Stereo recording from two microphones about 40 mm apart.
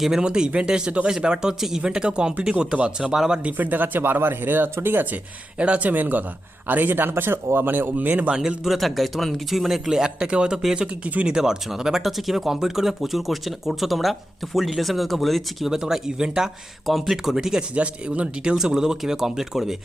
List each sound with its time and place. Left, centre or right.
0.2 s speech: right
3.6 s speech: right
5.5 s speech: right
5.9 s speech: right
8.3 s speech: centre
8.8 s speech: centre
9.9 s speech: centre
10.8 s speech: right
11.3 s speech: centre
15.7 s speech: centre
16.8 s speech: centre
17.3 s speech: centre
17.7 s speech: right
18.5 s speech: centre